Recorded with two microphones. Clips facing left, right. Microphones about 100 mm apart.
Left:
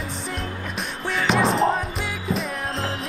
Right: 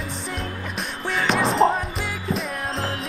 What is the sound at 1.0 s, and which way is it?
Music, centre (ahead or behind).